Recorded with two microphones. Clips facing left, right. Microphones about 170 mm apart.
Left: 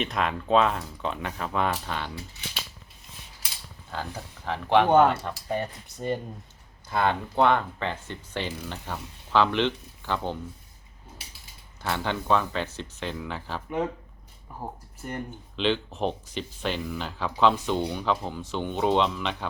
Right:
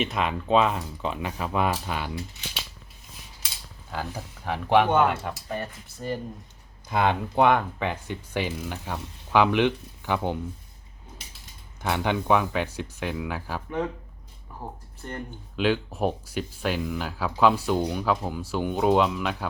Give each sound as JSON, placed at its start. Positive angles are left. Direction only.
{"t": 0.0, "sound": "speech", "side_deg": 0}
{"t": 3.9, "sound": "speech", "side_deg": -10}
{"t": 5.5, "sound": "speech", "side_deg": 25}
{"t": 6.9, "sound": "speech", "side_deg": -15}
{"t": 11.8, "sound": "speech", "side_deg": -15}
{"t": 14.6, "sound": "speech", "side_deg": 10}
{"t": 15.5, "sound": "speech", "side_deg": -10}